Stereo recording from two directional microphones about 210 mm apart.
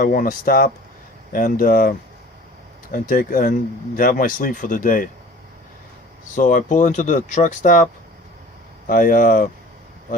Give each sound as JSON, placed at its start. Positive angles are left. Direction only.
{"t": 0.0, "sound": "speech", "side_deg": 40}
{"t": 6.3, "sound": "speech", "side_deg": 40}
{"t": 8.9, "sound": "speech", "side_deg": 40}